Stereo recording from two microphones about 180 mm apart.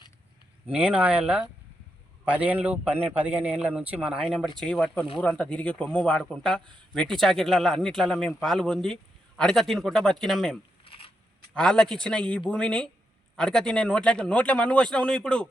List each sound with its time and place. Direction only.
0.7 s a man's voice: 5° right (ahead or behind)
10.8 s a sound: 30° left (ahead or behind)
11.5 s a man's voice: 5° left (ahead or behind)